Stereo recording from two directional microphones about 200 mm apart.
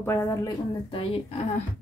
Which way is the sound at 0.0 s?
15° left (ahead or behind).